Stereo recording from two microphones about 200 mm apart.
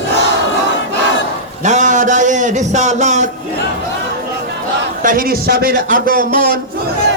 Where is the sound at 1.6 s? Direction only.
35° right (ahead or behind).